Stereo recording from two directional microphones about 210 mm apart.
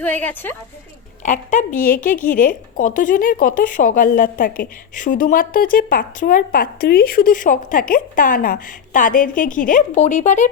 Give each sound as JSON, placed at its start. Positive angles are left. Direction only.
{"t": 0.0, "sound": "a woman's voice", "side_deg": 10}
{"t": 1.2, "sound": "speech", "side_deg": 35}